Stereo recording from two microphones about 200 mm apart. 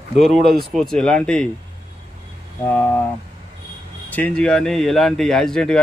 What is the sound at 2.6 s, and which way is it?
Speech, 5° left (ahead or behind).